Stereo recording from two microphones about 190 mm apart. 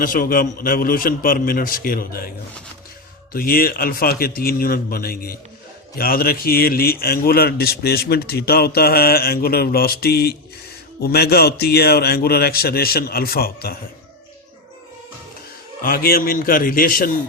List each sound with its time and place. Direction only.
0.0 s speech: 50° left (ahead or behind)
3.3 s a man's voice: 50° left (ahead or behind)
15.8 s speech: 50° left (ahead or behind)